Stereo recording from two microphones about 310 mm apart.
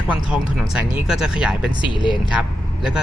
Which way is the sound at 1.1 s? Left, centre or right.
Centre.